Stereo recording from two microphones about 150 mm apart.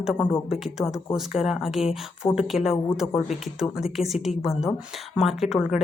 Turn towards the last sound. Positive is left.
turn(degrees=0)  # may be behind; listen again after turning